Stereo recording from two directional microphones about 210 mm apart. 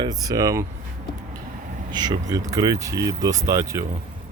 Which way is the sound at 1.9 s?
20° right (ahead or behind).